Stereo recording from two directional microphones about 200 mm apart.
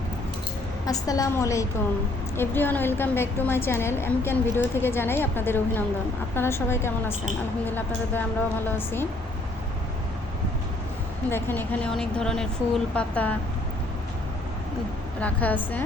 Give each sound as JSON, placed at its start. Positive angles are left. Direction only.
{"t": 0.9, "sound": "a woman's voice", "side_deg": 20}
{"t": 11.3, "sound": "a woman's voice", "side_deg": 10}
{"t": 15.2, "sound": "a woman's voice", "side_deg": 10}